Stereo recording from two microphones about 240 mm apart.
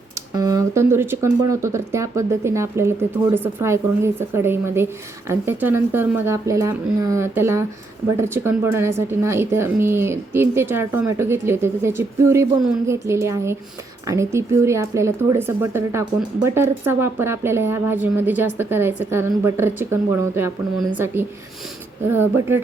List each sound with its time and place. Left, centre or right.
0.3 s speech: centre